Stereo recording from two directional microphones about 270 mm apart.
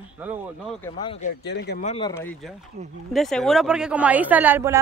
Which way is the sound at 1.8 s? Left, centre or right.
Centre.